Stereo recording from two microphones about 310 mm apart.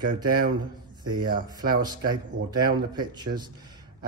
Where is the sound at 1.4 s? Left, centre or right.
Centre.